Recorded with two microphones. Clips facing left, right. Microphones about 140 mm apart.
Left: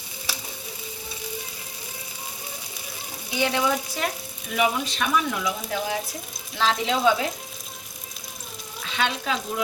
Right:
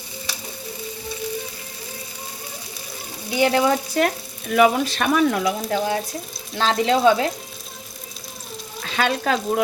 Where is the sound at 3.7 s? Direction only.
55° right (ahead or behind).